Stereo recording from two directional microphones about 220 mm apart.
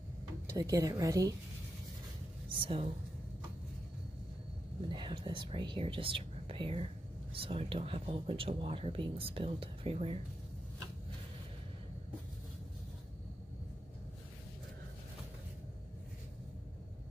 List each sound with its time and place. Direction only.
0.5 s a woman's voice: 15° right (ahead or behind)
2.6 s speech: 25° right (ahead or behind)
4.8 s speech: 20° right (ahead or behind)